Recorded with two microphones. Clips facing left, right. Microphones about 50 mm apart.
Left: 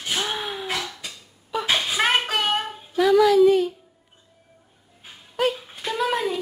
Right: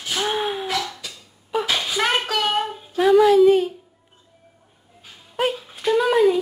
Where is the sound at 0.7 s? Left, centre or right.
Left.